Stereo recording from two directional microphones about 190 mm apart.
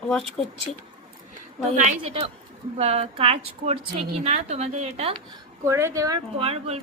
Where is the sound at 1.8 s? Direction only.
35° right (ahead or behind).